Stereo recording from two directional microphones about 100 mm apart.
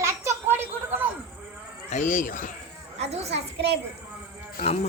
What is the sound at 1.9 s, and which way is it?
Insect, 90° left.